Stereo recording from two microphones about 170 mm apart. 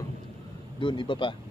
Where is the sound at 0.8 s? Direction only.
30° left (ahead or behind).